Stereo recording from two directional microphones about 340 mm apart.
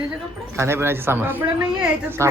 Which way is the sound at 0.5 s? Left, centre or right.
Centre.